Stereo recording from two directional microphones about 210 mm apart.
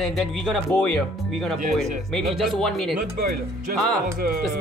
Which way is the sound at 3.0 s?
40° right (ahead or behind).